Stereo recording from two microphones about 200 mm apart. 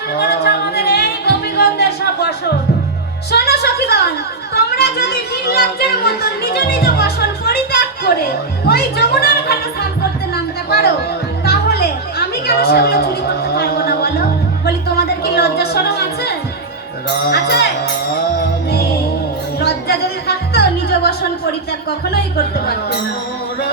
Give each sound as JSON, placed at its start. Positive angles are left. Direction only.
{"t": 0.2, "sound": "music", "side_deg": 55}
{"t": 3.3, "sound": "music", "side_deg": 50}
{"t": 4.5, "sound": "a sound", "side_deg": 55}
{"t": 8.6, "sound": "music", "side_deg": 50}
{"t": 11.4, "sound": "a sound", "side_deg": 50}
{"t": 13.6, "sound": "music", "side_deg": 50}
{"t": 19.5, "sound": "music", "side_deg": 55}
{"t": 22.1, "sound": "speech", "side_deg": 50}